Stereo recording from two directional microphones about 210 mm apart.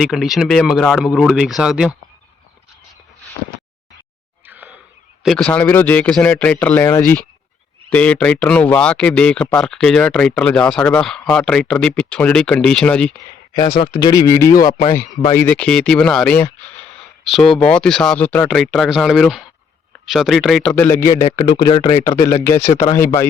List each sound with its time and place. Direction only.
0.0 s speech: centre (ahead or behind)
4.4 s a sound: 10° right (ahead or behind)
5.2 s speech: centre (ahead or behind)
13.5 s speech: 20° left (ahead or behind)
15.3 s speech: 10° left (ahead or behind)